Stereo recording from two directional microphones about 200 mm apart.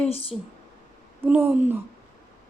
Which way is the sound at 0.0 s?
30° left (ahead or behind).